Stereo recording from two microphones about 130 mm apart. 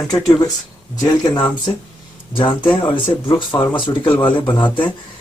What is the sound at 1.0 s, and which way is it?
Speech, 30° left (ahead or behind).